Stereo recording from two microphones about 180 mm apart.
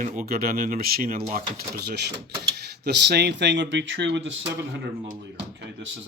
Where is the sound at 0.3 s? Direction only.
55° right (ahead or behind); by 4.4 s 85° right.